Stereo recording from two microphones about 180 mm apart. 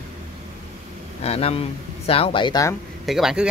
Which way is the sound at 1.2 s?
35° left (ahead or behind).